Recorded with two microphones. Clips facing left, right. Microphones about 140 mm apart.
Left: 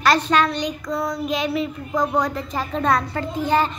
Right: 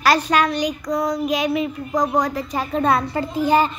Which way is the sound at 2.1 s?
10° right (ahead or behind).